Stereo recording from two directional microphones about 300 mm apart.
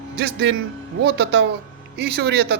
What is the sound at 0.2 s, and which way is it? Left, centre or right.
A man's voice, right.